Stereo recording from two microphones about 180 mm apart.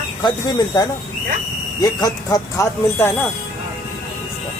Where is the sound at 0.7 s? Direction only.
20° left (ahead or behind).